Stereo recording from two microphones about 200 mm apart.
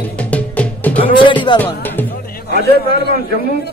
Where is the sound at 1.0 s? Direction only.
25° left (ahead or behind).